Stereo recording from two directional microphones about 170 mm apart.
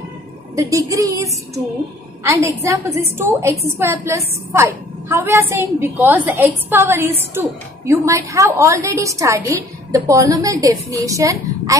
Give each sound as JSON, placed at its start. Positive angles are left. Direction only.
{"t": 0.6, "sound": "a woman's voice", "side_deg": -20}